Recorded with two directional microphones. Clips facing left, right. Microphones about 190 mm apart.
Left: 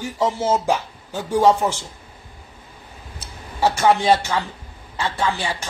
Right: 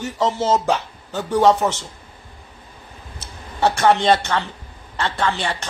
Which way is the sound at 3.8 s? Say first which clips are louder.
Even; 5° left (ahead or behind).